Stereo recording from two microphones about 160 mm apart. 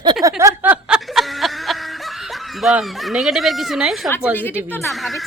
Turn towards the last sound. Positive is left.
turn(degrees=0)  # may be behind; listen again after turning